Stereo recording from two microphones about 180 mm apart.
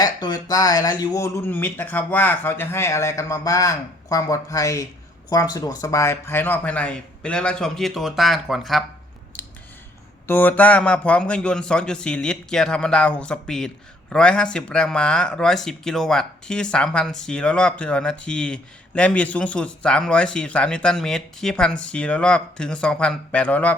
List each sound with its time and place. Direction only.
0.0 s speech: 20° left (ahead or behind); by 8.8 s centre (ahead or behind)
10.2 s speech: 10° left (ahead or behind)